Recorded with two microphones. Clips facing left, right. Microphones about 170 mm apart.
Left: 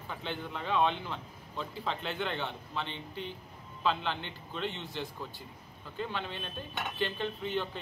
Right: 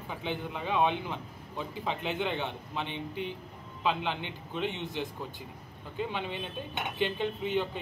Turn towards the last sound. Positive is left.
turn(degrees=-15)  # may be behind; listen again after turning